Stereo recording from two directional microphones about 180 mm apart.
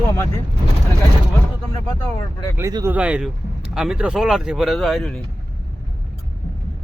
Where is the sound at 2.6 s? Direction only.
20° right (ahead or behind).